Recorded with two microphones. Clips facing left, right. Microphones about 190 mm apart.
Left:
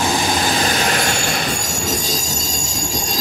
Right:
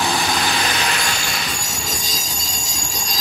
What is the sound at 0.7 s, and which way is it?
Train, 45° left (ahead or behind).